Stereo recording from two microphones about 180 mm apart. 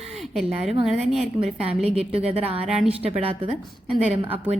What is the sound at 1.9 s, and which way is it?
Speech, 35° right (ahead or behind).